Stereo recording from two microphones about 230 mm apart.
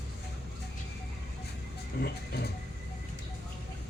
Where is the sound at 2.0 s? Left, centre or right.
Left.